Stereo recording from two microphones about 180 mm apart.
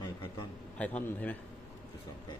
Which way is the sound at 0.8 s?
10° left (ahead or behind).